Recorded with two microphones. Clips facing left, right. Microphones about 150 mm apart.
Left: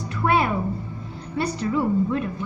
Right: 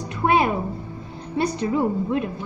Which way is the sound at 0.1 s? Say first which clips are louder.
Right 2 dB; 20° right (ahead or behind).